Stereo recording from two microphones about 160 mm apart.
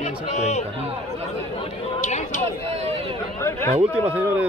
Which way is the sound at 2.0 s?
50° left (ahead or behind).